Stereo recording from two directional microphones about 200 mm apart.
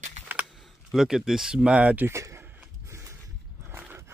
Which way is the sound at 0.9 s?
Centre (ahead or behind).